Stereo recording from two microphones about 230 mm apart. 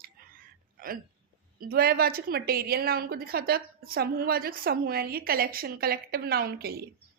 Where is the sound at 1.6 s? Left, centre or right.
Right.